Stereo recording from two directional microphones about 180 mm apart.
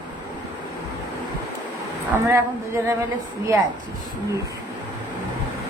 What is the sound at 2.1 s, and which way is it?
Speech, 15° right (ahead or behind).